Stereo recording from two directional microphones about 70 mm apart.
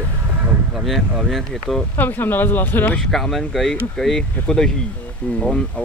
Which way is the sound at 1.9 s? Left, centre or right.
Left.